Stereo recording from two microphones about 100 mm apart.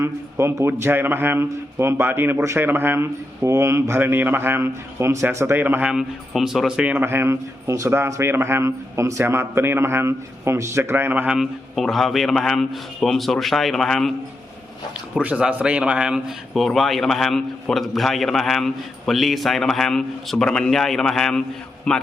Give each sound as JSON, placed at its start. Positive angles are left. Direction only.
{"t": 0.0, "sound": "a man's voice", "side_deg": -25}
{"t": 5.9, "sound": "a man's voice", "side_deg": -5}
{"t": 11.3, "sound": "a man's voice", "side_deg": 0}
{"t": 15.1, "sound": "a man's voice", "side_deg": -10}